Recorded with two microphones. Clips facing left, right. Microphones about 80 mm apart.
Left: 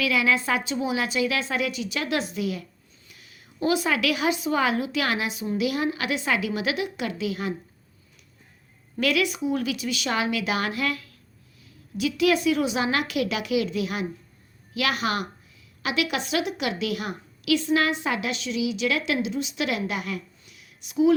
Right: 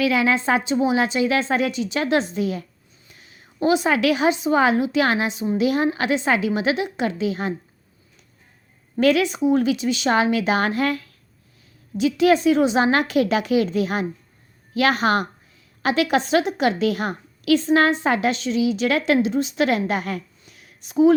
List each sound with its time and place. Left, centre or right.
0.0 s a woman's voice: right
9.0 s a woman's voice: right